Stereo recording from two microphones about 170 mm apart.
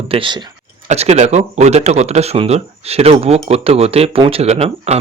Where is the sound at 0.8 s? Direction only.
40° right (ahead or behind).